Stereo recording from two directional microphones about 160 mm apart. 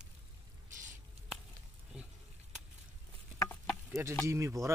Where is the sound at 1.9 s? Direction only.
5° right (ahead or behind).